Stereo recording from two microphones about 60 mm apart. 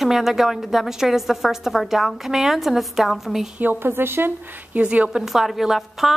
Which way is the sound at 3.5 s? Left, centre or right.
Right.